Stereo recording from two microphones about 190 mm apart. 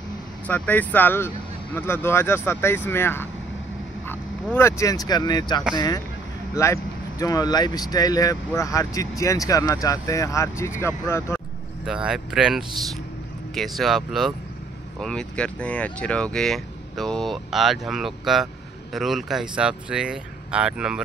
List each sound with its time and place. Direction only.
0.5 s speech: 10° left (ahead or behind)
11.8 s speech: 5° right (ahead or behind)